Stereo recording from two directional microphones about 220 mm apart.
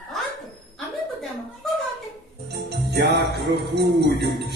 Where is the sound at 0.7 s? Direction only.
Centre (ahead or behind).